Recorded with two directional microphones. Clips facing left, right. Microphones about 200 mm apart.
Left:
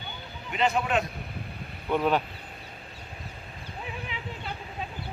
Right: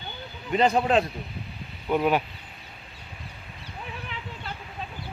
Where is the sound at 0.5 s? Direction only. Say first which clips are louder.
Right 5 dB; 35° right (ahead or behind).